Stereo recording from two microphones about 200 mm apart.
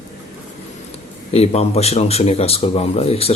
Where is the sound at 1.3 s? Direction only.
30° left (ahead or behind).